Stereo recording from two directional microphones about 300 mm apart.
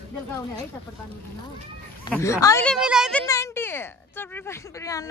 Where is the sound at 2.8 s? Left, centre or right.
Centre.